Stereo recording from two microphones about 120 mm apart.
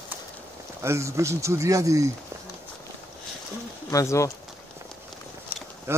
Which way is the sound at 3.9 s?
25° left (ahead or behind).